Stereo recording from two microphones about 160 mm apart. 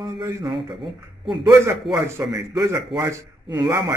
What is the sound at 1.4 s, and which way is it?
Speech, 15° right (ahead or behind).